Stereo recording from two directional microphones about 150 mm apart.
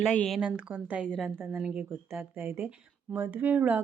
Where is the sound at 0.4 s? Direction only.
10° right (ahead or behind).